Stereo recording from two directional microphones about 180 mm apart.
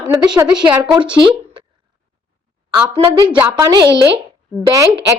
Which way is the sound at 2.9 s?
20° right (ahead or behind).